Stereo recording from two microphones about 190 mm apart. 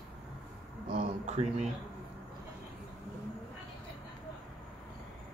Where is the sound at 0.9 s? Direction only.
40° right (ahead or behind).